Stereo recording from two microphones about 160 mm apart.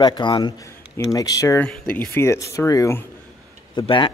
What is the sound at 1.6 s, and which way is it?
Speech, 10° left (ahead or behind).